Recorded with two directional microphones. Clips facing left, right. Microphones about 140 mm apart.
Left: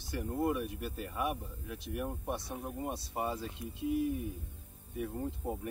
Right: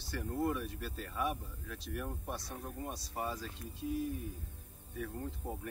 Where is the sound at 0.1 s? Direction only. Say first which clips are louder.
Left 2 dB; 15° left (ahead or behind).